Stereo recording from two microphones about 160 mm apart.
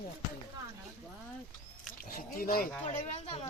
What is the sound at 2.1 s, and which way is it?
Speech, 65° left (ahead or behind).